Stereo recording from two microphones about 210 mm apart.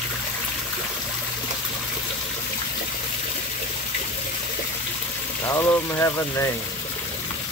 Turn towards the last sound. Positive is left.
turn(degrees=15)  # may be behind; listen again after turning